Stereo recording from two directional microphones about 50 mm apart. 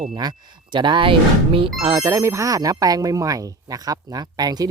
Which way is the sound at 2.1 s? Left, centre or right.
Right.